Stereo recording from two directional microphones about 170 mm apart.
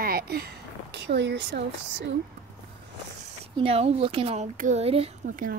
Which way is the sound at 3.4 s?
35° right (ahead or behind).